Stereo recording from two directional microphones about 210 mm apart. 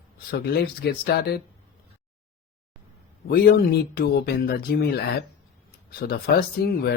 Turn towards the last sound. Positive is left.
turn(degrees=50)  # may be behind; listen again after turning